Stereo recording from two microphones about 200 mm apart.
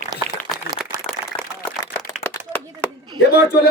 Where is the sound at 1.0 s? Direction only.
5° left (ahead or behind).